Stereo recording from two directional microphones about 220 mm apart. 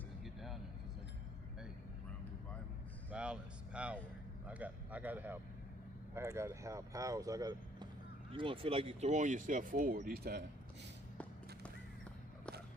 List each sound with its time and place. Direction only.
0.3 s vehicle: centre (ahead or behind)
3.1 s a sound: 5° right (ahead or behind)
6.1 s speech: 10° right (ahead or behind); by 10.4 s 45° right (ahead or behind)